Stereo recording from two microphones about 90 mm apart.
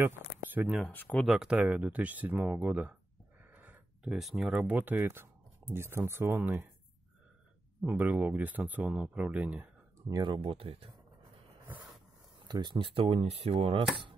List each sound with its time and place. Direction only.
0.0 s a sound: 20° right (ahead or behind)
0.8 s speech: 20° left (ahead or behind)
1.1 s speech: centre (ahead or behind)
1.6 s speech: 15° right (ahead or behind)
3.4 s a sound: 20° right (ahead or behind)
4.0 s speech: 5° right (ahead or behind); by 6.7 s 20° right (ahead or behind)
7.8 s speech: 20° right (ahead or behind)
9.9 s a sound: 40° right (ahead or behind)
10.2 s speech: 75° right (ahead or behind)
12.4 s speech: 55° right (ahead or behind); by 13.8 s 90° right